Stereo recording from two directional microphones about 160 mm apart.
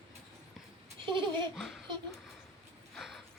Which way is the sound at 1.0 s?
30° right (ahead or behind).